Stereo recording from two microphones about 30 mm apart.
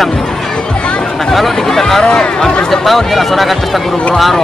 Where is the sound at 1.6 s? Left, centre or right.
Centre.